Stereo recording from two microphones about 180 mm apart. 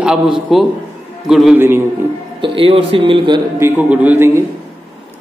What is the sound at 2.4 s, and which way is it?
Speech, 30° right (ahead or behind).